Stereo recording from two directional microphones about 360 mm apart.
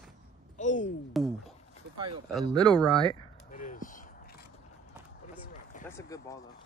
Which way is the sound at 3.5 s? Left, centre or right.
Left.